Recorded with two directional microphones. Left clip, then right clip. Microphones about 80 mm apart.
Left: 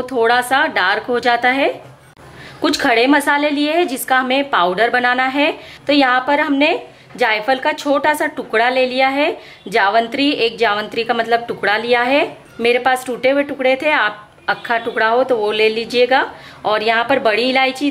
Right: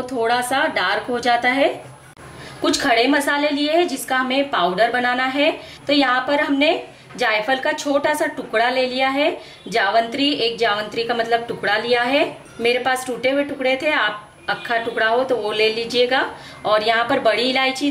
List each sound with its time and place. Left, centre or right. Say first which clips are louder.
0.0 s a woman's voice: left 5 dB; left